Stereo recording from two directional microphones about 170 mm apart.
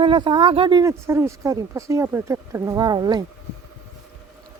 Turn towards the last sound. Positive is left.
turn(degrees=-25)  # may be behind; listen again after turning